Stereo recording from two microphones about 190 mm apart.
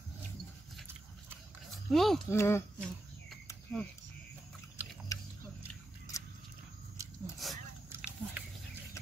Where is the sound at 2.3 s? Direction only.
15° left (ahead or behind).